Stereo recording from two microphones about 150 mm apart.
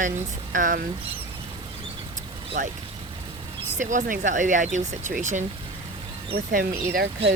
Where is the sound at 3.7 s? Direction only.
55° right (ahead or behind).